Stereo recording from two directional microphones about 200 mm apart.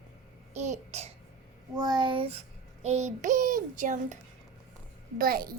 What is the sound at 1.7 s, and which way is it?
Speech, 20° right (ahead or behind).